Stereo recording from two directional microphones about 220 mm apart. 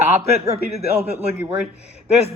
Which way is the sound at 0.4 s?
30° right (ahead or behind).